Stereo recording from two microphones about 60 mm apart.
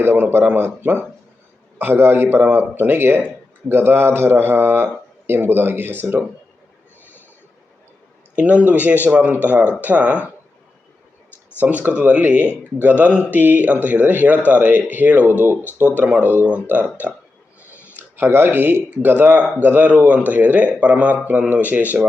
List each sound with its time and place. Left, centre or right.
0.0 s a man's voice: right
8.4 s speech: right
11.6 s a man's voice: right
18.2 s speech: right